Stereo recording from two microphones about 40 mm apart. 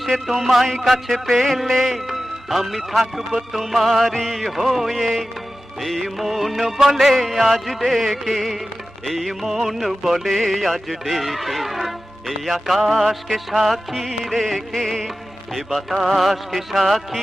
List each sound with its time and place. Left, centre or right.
0.0 s music: centre